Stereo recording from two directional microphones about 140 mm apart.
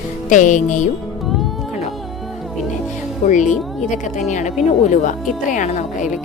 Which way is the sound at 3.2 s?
65° left (ahead or behind).